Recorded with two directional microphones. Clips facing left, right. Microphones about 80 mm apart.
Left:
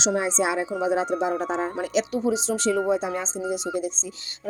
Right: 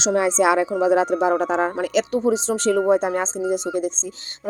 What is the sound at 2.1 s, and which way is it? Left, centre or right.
Speech, right.